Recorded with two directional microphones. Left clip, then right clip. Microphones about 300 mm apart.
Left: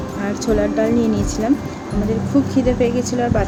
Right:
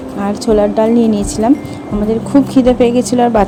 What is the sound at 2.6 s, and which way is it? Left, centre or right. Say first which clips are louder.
Speech: right 8 dB; right.